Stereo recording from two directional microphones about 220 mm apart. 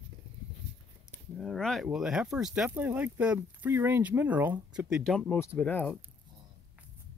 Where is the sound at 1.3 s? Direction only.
Centre (ahead or behind).